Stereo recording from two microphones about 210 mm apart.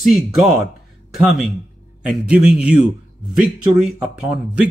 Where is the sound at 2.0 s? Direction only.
5° right (ahead or behind).